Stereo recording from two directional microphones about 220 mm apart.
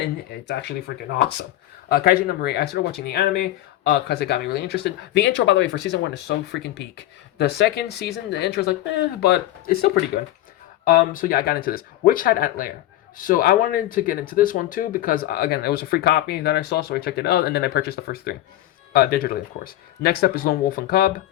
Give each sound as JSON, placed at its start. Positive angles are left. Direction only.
{"t": 0.4, "sound": "speech", "side_deg": 50}
{"t": 10.8, "sound": "speech", "side_deg": 40}